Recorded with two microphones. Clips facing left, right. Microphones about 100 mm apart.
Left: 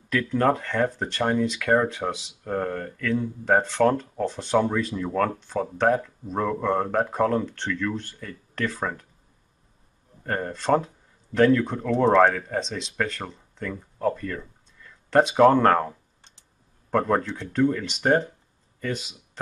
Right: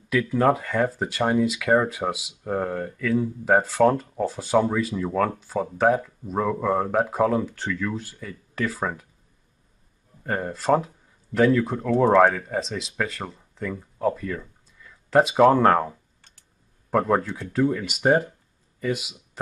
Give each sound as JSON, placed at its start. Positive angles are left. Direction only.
{"t": 0.1, "sound": "speech", "side_deg": -5}
{"t": 10.2, "sound": "speech", "side_deg": -5}
{"t": 16.2, "sound": "a sound", "side_deg": 20}
{"t": 16.9, "sound": "speech", "side_deg": -5}